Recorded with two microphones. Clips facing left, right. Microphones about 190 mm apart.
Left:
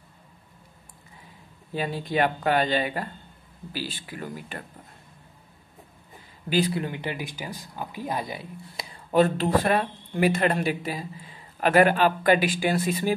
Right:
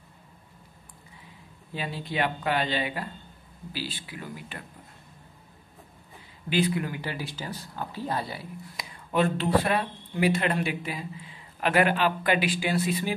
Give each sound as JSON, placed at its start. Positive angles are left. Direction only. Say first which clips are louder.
{"t": 1.7, "sound": "speech", "louder": "left 5 dB", "side_deg": 45}
{"t": 6.5, "sound": "speech", "louder": "left 1 dB", "side_deg": 35}
{"t": 6.8, "sound": "speech", "louder": "left 2 dB", "side_deg": 20}
{"t": 8.7, "sound": "speech", "louder": "left 5 dB", "side_deg": 40}